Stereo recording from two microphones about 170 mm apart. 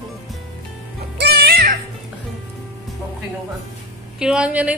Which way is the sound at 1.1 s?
70° right (ahead or behind).